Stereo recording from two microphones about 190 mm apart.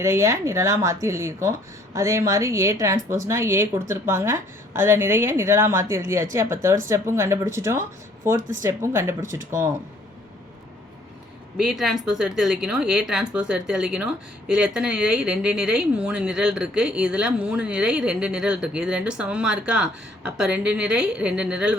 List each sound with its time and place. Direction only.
0.0 s speech: 15° right (ahead or behind)
11.5 s speech: 5° right (ahead or behind)